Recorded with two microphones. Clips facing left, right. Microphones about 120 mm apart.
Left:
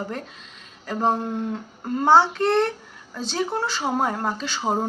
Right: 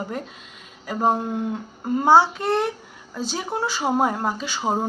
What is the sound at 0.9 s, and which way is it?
Speech, 10° right (ahead or behind).